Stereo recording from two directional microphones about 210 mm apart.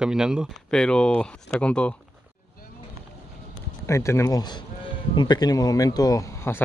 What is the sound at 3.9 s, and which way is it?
Speech, 15° left (ahead or behind).